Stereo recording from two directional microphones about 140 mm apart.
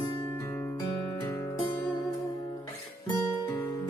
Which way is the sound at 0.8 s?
35° left (ahead or behind).